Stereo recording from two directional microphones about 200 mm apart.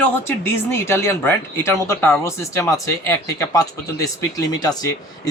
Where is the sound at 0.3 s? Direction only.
10° left (ahead or behind).